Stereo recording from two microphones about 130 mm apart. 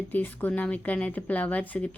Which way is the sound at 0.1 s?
15° left (ahead or behind).